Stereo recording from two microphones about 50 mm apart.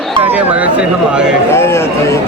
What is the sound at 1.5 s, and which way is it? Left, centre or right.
Speech, left.